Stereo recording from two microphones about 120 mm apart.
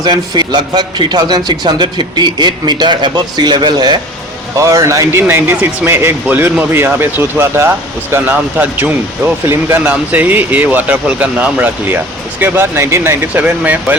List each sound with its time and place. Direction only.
0.0 s a man's voice: 35° right (ahead or behind)
4.5 s speech: 25° right (ahead or behind)